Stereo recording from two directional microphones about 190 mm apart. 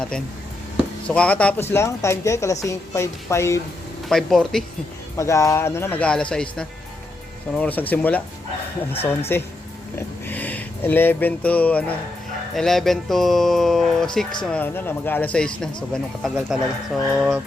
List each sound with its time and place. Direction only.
1.0 s a woman's voice: 5° left (ahead or behind)
4.1 s speech: centre (ahead or behind)
5.1 s a woman's voice: 15° left (ahead or behind)
9.3 s a woman's voice: 10° left (ahead or behind)